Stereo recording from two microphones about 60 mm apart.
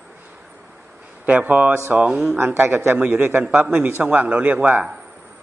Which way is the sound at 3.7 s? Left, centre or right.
Right.